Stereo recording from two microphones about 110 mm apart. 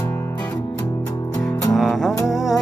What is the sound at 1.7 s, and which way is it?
Music, centre (ahead or behind).